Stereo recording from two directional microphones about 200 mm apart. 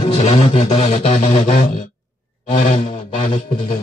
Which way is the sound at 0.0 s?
30° left (ahead or behind).